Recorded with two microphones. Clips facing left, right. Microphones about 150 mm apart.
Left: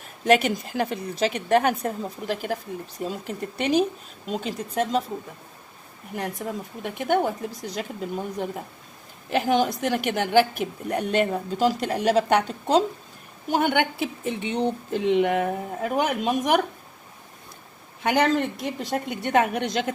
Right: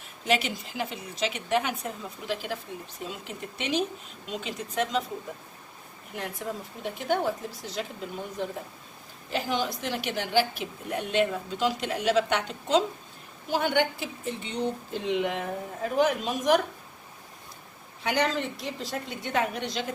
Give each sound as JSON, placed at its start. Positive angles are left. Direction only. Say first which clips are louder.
{"t": 0.2, "sound": "a woman's voice", "louder": "left 7 dB", "side_deg": 50}
{"t": 6.1, "sound": "a woman's voice", "louder": "left 4 dB", "side_deg": 50}
{"t": 9.3, "sound": "a woman's voice", "louder": "left 7 dB", "side_deg": 55}
{"t": 13.5, "sound": "speech", "louder": "left 3 dB", "side_deg": 55}
{"t": 18.0, "sound": "speech", "louder": "left 6 dB", "side_deg": 55}